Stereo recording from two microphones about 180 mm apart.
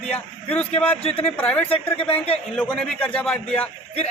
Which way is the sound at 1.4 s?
5° left (ahead or behind).